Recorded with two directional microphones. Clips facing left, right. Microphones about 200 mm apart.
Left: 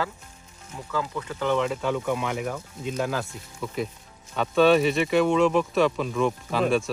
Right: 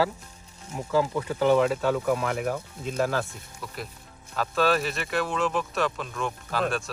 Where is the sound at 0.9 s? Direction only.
30° right (ahead or behind).